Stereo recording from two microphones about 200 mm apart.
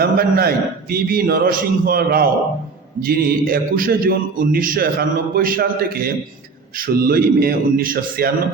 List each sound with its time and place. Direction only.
0.0 s a man's voice: 50° right (ahead or behind)